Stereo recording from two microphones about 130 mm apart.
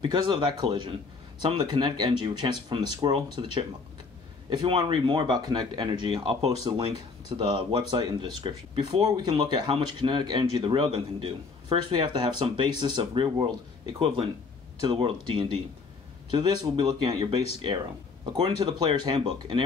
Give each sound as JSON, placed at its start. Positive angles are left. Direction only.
{"t": 0.0, "sound": "speech", "side_deg": -40}